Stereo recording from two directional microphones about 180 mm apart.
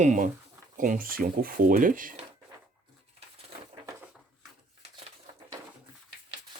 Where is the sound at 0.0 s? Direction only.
40° right (ahead or behind).